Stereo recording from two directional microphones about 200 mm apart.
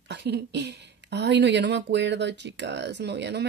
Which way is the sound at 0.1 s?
60° right (ahead or behind).